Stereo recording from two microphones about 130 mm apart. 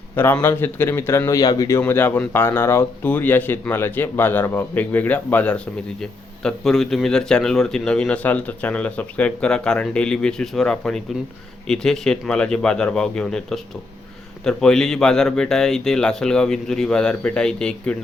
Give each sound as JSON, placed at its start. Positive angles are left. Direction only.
{"t": 0.2, "sound": "a man's voice", "side_deg": 15}
{"t": 1.8, "sound": "speech", "side_deg": 15}